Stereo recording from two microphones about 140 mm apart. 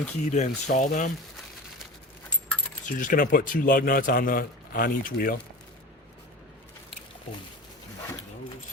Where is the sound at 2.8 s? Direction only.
75° left (ahead or behind); by 5.4 s 90° left.